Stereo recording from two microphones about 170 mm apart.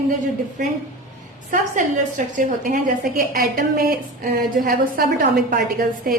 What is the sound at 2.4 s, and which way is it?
A woman's voice, 50° right (ahead or behind).